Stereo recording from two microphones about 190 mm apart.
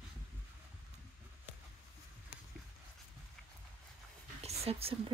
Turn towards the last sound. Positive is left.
turn(degrees=-30)  # may be behind; listen again after turning